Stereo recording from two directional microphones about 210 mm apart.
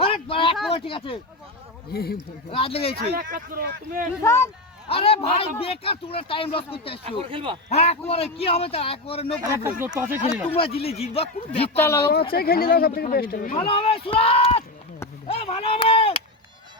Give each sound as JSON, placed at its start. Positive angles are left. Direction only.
{"t": 0.0, "sound": "a sound", "side_deg": 25}
{"t": 0.7, "sound": "a man's voice", "side_deg": 25}
{"t": 1.9, "sound": "speech", "side_deg": 45}
{"t": 2.5, "sound": "a man's voice", "side_deg": 25}
{"t": 3.0, "sound": "speech", "side_deg": -40}
{"t": 4.2, "sound": "speech", "side_deg": 10}
{"t": 4.9, "sound": "a man's voice", "side_deg": 25}
{"t": 7.0, "sound": "speech", "side_deg": -25}
{"t": 7.7, "sound": "a man's voice", "side_deg": 30}
{"t": 9.4, "sound": "speech", "side_deg": -15}
{"t": 10.5, "sound": "a man's voice", "side_deg": 25}
{"t": 11.8, "sound": "speech", "side_deg": 10}
{"t": 12.3, "sound": "speech", "side_deg": 45}
{"t": 13.6, "sound": "a man's voice", "side_deg": 25}